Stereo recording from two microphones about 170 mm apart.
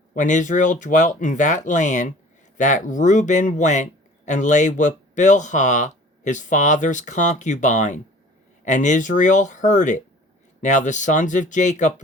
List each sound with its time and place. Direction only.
0.1 s speech: 45° left (ahead or behind)